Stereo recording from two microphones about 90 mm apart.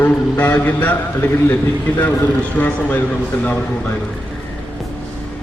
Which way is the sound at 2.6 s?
20° left (ahead or behind).